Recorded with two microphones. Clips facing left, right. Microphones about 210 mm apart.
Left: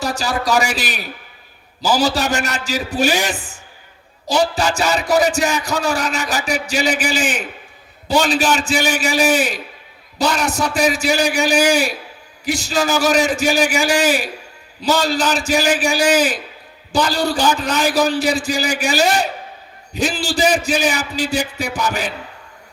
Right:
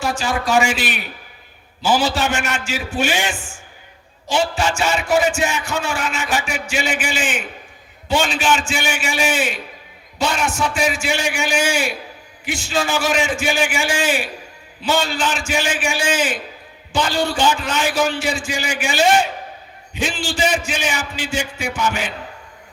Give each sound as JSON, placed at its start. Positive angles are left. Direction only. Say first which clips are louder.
{"t": 0.0, "sound": "a man's voice", "louder": "left 1 dB", "side_deg": 40}